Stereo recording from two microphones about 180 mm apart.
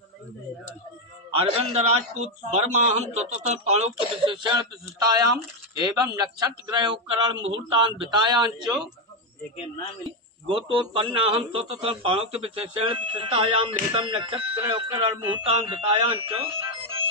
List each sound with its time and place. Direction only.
1.3 s a man's voice: 35° right (ahead or behind)
7.3 s a man's voice: 90° right
7.7 s a man's voice: 25° right (ahead or behind)
10.5 s a man's voice: 30° right (ahead or behind)